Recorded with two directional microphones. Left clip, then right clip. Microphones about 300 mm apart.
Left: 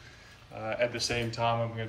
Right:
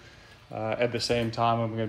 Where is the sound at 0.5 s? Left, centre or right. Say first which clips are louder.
Right 3 dB; centre.